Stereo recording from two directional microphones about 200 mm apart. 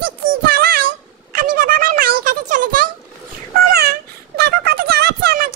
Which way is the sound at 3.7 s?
50° right (ahead or behind).